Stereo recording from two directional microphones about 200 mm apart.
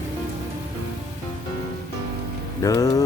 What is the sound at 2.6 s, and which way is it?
Speech, 15° left (ahead or behind).